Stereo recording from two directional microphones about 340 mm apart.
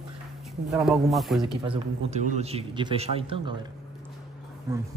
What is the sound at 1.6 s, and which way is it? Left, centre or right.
A man's voice, centre.